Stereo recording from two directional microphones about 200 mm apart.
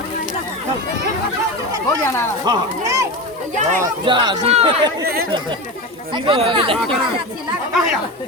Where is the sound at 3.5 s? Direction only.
40° right (ahead or behind).